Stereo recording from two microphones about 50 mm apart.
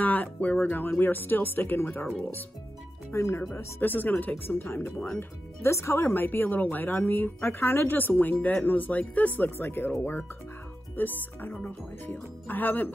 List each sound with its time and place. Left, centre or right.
0.0 s speech: left
0.8 s speech: left
3.1 s speech: left
3.5 s speech: left
4.6 s speech: left
5.6 s speech: left
6.1 s speech: left
9.6 s speech: left